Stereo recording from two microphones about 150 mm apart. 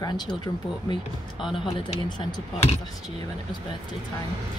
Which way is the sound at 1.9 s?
30° left (ahead or behind).